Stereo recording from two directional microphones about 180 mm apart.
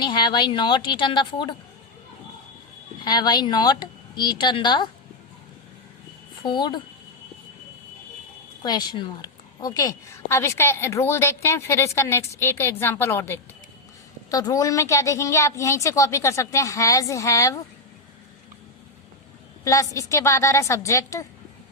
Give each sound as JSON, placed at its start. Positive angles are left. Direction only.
{"t": 0.0, "sound": "a woman's voice", "side_deg": 25}
{"t": 3.0, "sound": "a woman's voice", "side_deg": 25}
{"t": 6.4, "sound": "a woman's voice", "side_deg": 25}
{"t": 8.6, "sound": "a woman's voice", "side_deg": 25}
{"t": 19.6, "sound": "a woman's voice", "side_deg": 15}